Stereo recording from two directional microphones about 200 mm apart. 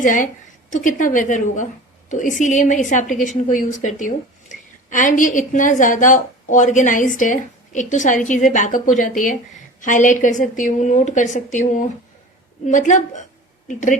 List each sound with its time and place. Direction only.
0.0 s a woman's voice: 40° left (ahead or behind)